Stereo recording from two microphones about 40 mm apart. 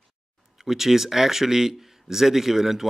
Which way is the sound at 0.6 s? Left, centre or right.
Centre.